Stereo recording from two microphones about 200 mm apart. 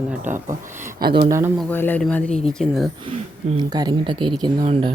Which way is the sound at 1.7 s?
10° left (ahead or behind).